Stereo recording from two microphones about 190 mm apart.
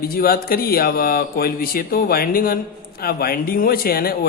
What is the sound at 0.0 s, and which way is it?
A man's voice, 50° left (ahead or behind).